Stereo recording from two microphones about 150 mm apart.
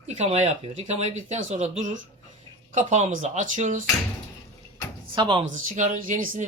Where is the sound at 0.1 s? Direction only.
45° right (ahead or behind).